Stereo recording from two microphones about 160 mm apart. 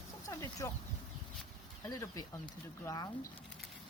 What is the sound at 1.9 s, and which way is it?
Speech, 20° left (ahead or behind).